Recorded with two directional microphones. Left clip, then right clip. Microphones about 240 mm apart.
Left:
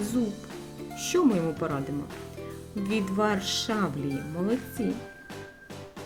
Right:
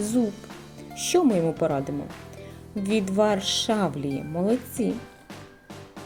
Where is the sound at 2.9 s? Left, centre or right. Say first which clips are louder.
Right 5 dB; centre.